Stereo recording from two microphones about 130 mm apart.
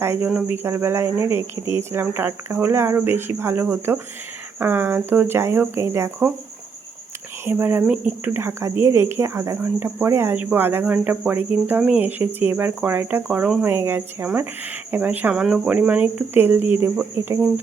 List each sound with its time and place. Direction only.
0.0 s speech: 20° right (ahead or behind)
7.4 s speech: 15° right (ahead or behind)
17.2 s speech: 20° right (ahead or behind)